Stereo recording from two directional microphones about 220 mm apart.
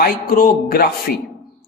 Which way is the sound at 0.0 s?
40° left (ahead or behind).